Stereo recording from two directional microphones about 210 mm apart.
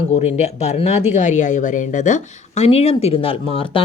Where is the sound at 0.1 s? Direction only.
30° left (ahead or behind).